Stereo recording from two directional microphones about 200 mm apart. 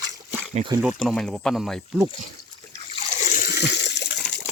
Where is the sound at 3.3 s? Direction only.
45° left (ahead or behind).